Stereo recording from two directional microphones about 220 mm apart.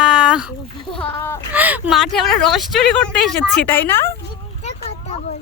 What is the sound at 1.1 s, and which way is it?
Speech, 10° left (ahead or behind).